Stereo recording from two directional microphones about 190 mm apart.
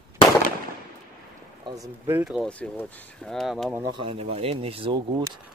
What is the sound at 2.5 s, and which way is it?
Speech, 10° left (ahead or behind).